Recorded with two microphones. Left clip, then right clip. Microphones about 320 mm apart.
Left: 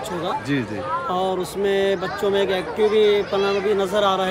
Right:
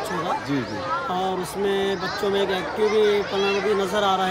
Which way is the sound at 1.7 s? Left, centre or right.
Centre.